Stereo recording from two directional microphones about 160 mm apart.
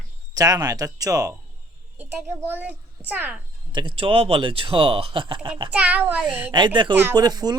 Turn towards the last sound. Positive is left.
turn(degrees=-25)  # may be behind; listen again after turning